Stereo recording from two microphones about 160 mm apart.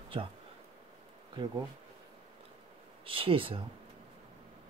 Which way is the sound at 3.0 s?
35° right (ahead or behind).